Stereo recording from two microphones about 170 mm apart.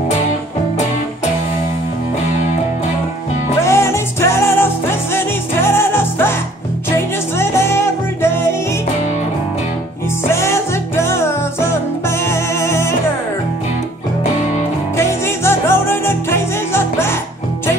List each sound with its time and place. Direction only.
3.6 s music: 15° left (ahead or behind)
10.3 s music: 15° left (ahead or behind)
15.0 s music: 15° left (ahead or behind)